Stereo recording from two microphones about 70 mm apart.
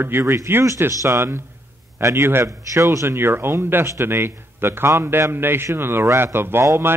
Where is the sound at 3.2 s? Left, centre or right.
Right.